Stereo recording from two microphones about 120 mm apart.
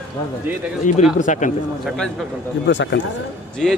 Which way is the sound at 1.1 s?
90° left.